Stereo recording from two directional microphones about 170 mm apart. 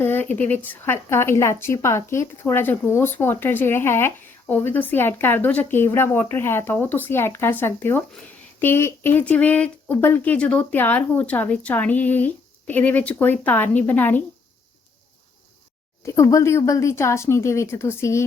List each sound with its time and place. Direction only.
0.0 s speech: 10° left (ahead or behind)
16.0 s speech: 15° left (ahead or behind)